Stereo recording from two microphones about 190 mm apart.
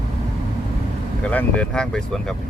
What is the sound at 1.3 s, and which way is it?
Speech, 5° left (ahead or behind).